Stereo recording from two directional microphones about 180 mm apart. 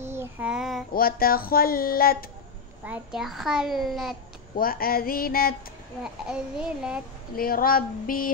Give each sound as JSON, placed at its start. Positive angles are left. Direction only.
{"t": 0.0, "sound": "child singing", "side_deg": -15}
{"t": 0.9, "sound": "a sound", "side_deg": 55}
{"t": 2.8, "sound": "a child's voice", "side_deg": -5}
{"t": 4.6, "sound": "a sound", "side_deg": 55}
{"t": 6.2, "sound": "a child's voice", "side_deg": -5}
{"t": 7.3, "sound": "female singing", "side_deg": 55}